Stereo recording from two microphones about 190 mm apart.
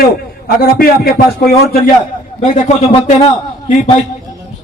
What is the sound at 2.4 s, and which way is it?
Speech, 35° left (ahead or behind).